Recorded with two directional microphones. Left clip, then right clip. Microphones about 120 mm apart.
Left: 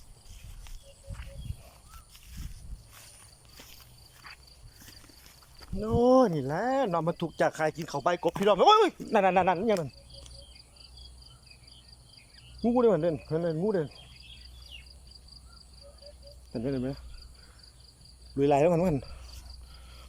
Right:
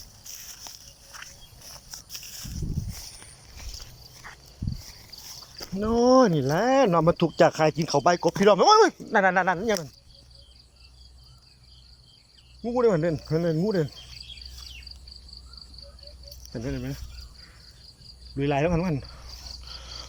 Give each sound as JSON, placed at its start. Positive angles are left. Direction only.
{"t": 1.9, "sound": "a sound", "side_deg": -90}
{"t": 5.8, "sound": "speech", "side_deg": 15}
{"t": 6.3, "sound": "speech", "side_deg": -5}
{"t": 8.0, "sound": "speech", "side_deg": 0}
{"t": 8.9, "sound": "speech", "side_deg": 15}
{"t": 12.6, "sound": "speech", "side_deg": 20}
{"t": 16.6, "sound": "speech", "side_deg": 30}
{"t": 18.3, "sound": "cricket", "side_deg": 30}
{"t": 19.6, "sound": "cricket", "side_deg": 0}